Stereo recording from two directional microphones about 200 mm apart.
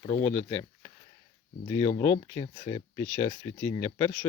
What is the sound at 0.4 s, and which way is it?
Speech, 20° left (ahead or behind).